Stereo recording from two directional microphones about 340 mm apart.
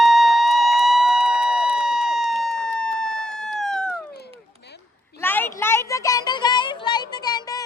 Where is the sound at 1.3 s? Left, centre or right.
Right.